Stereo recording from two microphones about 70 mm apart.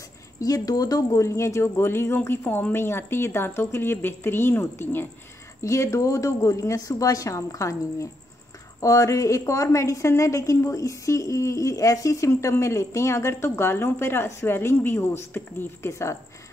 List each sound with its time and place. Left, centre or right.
0.4 s a woman's voice: left
5.6 s a woman's voice: left
15.9 s a woman's voice: left